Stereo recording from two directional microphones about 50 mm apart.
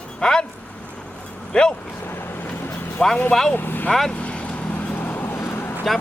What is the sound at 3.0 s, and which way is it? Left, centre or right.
Speech, centre.